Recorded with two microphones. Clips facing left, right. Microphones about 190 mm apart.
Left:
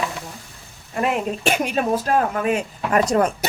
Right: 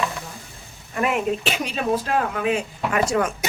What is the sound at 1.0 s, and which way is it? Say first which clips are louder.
Speech: even; 50° left (ahead or behind).